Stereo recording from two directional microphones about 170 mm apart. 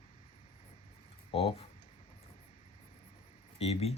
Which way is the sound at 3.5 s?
35° left (ahead or behind).